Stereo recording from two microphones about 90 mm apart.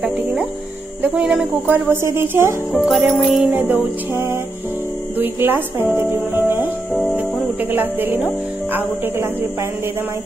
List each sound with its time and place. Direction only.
0.0 s speech: 10° right (ahead or behind)
1.7 s speech: 30° right (ahead or behind)
2.7 s music: 5° right (ahead or behind)
3.5 s speech: 20° right (ahead or behind)
5.9 s music: 25° right (ahead or behind)
6.9 s music: centre (ahead or behind)
7.6 s speech: 20° right (ahead or behind)